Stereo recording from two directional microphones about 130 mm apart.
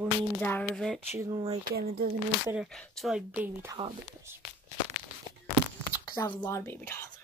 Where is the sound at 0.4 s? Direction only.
10° left (ahead or behind).